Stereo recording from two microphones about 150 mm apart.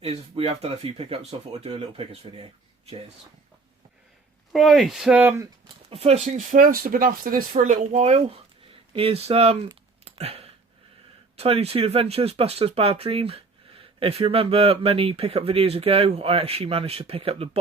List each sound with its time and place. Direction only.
0.0 s speech: 40° right (ahead or behind)
4.5 s speech: centre (ahead or behind)
5.9 s speech: 45° right (ahead or behind); by 7.4 s 70° right (ahead or behind)
7.5 s speech: 55° right (ahead or behind)
10.0 s a sound: 45° right (ahead or behind)
11.3 s speech: 45° right (ahead or behind)